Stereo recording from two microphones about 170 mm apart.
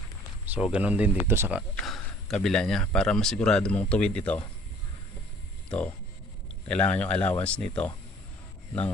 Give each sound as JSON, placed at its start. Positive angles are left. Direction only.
{"t": 0.5, "sound": "speech", "side_deg": -10}
{"t": 1.7, "sound": "speech", "side_deg": 5}
{"t": 5.6, "sound": "speech", "side_deg": 5}